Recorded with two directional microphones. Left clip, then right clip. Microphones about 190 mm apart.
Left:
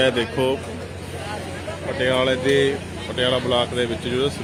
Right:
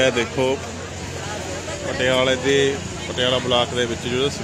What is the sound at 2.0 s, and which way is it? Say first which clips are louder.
Speech: right 1 dB; centre (ahead or behind).